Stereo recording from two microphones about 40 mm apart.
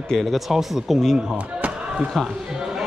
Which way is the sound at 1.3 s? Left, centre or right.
Right.